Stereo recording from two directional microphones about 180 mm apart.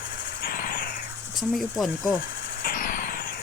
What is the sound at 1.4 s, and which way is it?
Speech, centre (ahead or behind).